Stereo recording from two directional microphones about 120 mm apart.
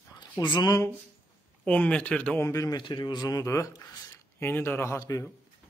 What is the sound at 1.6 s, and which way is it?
Speech, 10° left (ahead or behind).